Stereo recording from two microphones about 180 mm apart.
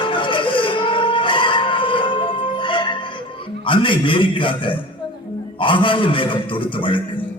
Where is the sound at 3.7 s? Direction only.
30° left (ahead or behind).